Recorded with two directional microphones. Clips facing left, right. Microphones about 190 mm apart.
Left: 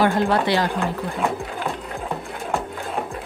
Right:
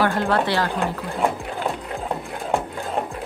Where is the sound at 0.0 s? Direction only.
15° left (ahead or behind).